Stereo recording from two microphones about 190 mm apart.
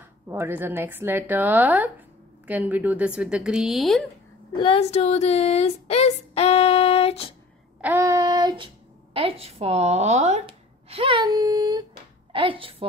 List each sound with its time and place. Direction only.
0.3 s a woman's voice: 10° right (ahead or behind)
4.6 s a sound: 30° left (ahead or behind)
7.8 s a woman's voice: 15° right (ahead or behind); by 12.8 s 30° right (ahead or behind)